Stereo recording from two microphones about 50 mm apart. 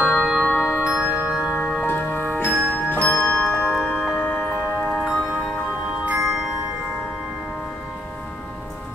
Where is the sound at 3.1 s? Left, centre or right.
Centre.